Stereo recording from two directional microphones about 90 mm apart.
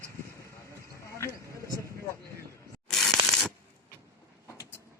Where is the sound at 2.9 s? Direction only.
5° left (ahead or behind).